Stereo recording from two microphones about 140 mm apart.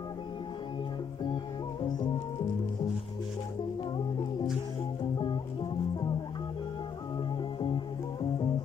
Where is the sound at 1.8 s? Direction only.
30° left (ahead or behind).